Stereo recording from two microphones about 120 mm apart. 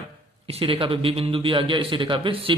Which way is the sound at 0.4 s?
50° right (ahead or behind).